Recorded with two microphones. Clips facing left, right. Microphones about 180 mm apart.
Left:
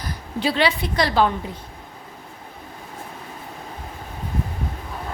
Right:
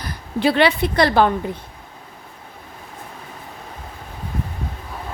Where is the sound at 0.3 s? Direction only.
60° right (ahead or behind).